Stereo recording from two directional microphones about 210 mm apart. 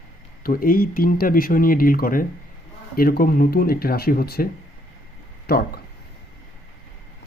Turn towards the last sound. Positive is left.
turn(degrees=50)  # may be behind; listen again after turning